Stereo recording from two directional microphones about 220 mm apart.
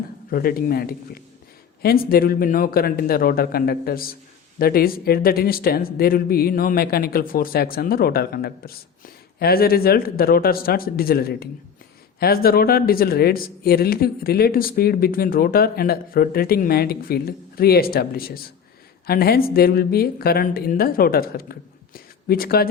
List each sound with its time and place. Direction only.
0.3 s a man's voice: 40° left (ahead or behind)